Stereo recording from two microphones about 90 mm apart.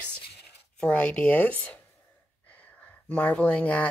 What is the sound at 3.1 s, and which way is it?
Speech, 15° left (ahead or behind).